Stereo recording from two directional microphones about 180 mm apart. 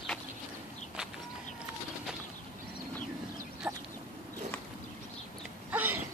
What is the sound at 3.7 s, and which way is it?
Chicken, 5° right (ahead or behind).